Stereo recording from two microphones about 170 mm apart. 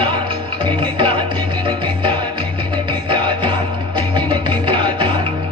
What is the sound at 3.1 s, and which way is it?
Music, 30° right (ahead or behind).